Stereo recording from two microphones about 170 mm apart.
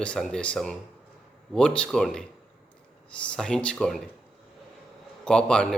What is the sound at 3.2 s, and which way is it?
Speech, 5° left (ahead or behind).